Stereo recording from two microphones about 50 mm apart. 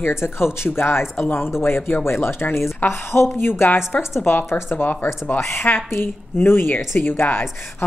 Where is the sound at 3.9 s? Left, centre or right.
Centre.